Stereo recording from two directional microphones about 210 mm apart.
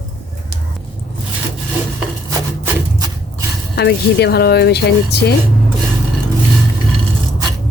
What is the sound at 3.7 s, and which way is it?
A woman's voice, 50° left (ahead or behind).